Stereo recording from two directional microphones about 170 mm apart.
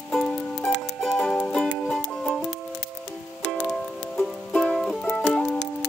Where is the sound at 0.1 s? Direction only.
5° left (ahead or behind).